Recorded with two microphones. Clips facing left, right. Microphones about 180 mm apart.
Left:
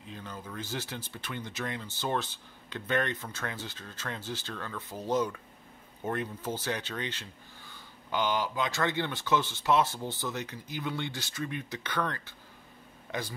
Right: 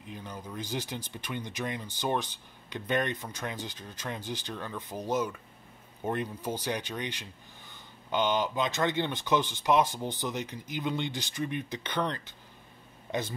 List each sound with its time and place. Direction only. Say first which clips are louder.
0.1 s speech: right 1 dB; 15° right (ahead or behind)